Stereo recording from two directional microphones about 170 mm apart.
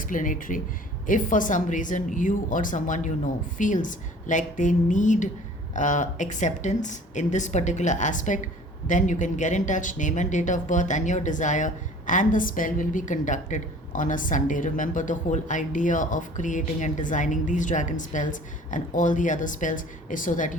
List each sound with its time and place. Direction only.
0.1 s speech: 50° left (ahead or behind)